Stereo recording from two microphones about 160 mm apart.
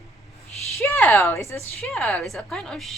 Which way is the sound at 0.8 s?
15° left (ahead or behind).